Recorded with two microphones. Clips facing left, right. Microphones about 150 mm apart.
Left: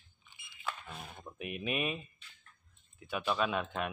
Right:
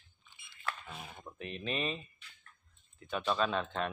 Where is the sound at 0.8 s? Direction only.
Centre (ahead or behind).